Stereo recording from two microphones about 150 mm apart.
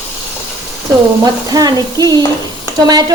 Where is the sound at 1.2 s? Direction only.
25° right (ahead or behind).